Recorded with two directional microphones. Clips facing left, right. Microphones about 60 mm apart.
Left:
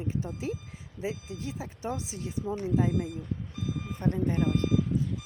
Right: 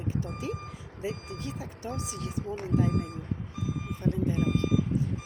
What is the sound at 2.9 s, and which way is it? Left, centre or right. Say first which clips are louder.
Speech: left 1 dB; right.